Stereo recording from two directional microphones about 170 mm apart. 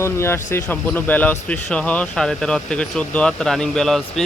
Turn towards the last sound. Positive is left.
turn(degrees=0)  # may be behind; listen again after turning